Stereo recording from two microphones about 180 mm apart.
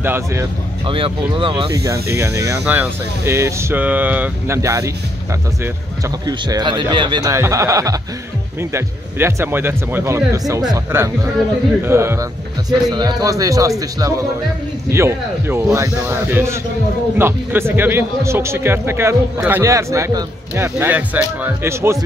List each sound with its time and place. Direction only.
0.0 s a man's voice: 15° right (ahead or behind)
0.8 s speech: 30° right (ahead or behind)
1.9 s a man's voice: 15° right (ahead or behind)
6.0 s a man's voice: 20° right (ahead or behind)